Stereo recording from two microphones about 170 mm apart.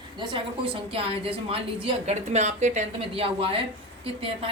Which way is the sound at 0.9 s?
35° right (ahead or behind).